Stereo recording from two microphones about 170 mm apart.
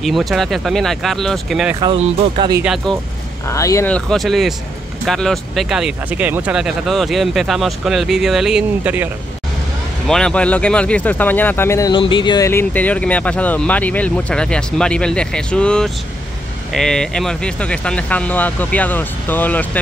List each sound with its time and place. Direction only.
0.0 s speech: centre (ahead or behind)
2.0 s speech: 35° right (ahead or behind)
2.6 s speech: 5° right (ahead or behind)
3.4 s speech: 20° left (ahead or behind)
3.9 s speech: centre (ahead or behind)
10.0 s speech: 5° left (ahead or behind)
11.9 s speech: 30° left (ahead or behind)
12.4 s speech: 10° left (ahead or behind)